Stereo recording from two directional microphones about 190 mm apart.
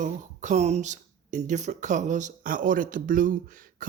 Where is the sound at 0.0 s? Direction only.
40° right (ahead or behind).